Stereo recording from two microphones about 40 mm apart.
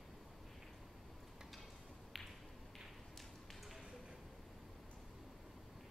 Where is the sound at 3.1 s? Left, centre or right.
Centre.